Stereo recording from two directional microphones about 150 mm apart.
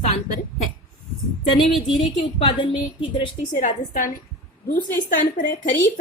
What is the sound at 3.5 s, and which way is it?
A woman's voice, 60° left (ahead or behind).